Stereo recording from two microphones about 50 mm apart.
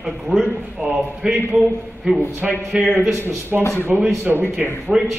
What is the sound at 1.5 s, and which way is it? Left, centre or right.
A man's voice, centre.